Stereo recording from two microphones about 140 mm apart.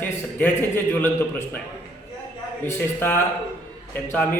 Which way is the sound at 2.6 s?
15° left (ahead or behind).